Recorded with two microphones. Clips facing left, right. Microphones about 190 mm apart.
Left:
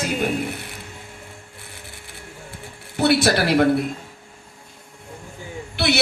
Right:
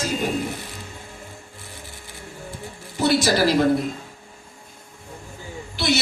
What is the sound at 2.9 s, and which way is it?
Speech, 65° left (ahead or behind).